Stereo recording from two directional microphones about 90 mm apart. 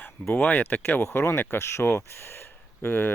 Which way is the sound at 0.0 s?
20° left (ahead or behind).